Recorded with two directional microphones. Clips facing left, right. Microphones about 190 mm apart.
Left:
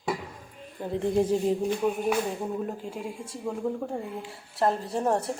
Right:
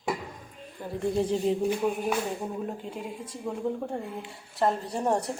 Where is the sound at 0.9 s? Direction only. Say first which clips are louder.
Left 2 dB; 20° left (ahead or behind).